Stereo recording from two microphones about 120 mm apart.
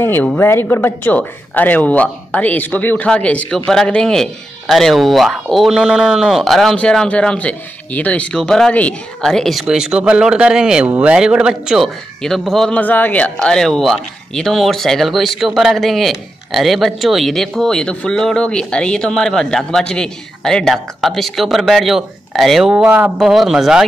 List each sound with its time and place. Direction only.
0.0 s speech: 15° left (ahead or behind); by 23.1 s 15° right (ahead or behind)
23.1 s speech: 5° right (ahead or behind)